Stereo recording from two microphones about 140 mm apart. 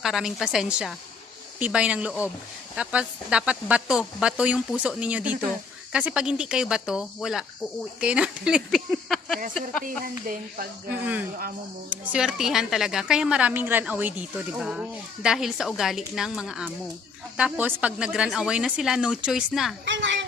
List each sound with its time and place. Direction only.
0.0 s a woman's voice: 5° right (ahead or behind)
9.8 s speech: 85° right
11.9 s a woman's voice: 5° right (ahead or behind)